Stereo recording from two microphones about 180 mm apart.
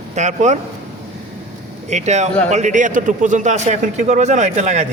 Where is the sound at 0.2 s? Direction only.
40° right (ahead or behind).